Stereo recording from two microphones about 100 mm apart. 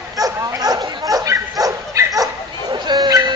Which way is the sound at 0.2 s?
35° right (ahead or behind).